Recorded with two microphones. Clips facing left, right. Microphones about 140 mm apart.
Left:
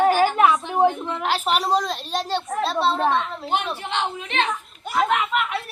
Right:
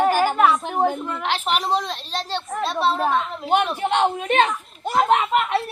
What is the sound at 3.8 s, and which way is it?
Speech, 50° right (ahead or behind).